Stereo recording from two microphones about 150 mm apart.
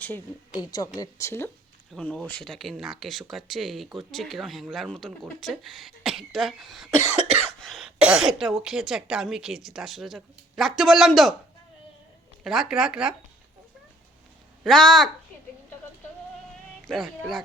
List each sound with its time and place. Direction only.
0.6 s speech: 25° left (ahead or behind); by 11.3 s centre (ahead or behind)
12.4 s speech: 5° right (ahead or behind)
14.6 s speech: 5° left (ahead or behind)
16.8 s speech: centre (ahead or behind)